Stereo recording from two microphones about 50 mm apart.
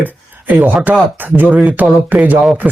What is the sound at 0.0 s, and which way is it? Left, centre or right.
Speech, right.